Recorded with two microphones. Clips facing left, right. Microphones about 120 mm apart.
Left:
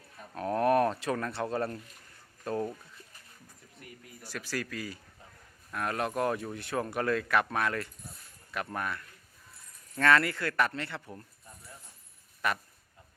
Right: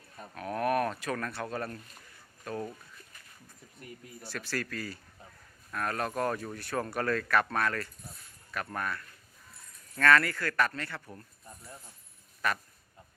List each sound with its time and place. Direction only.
0.3 s speech: 30° left (ahead or behind)
3.8 s a sound: 25° right (ahead or behind)
4.2 s speech: 15° left (ahead or behind)